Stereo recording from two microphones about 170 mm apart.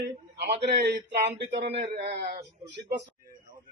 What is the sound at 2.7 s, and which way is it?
Speech, 90° right.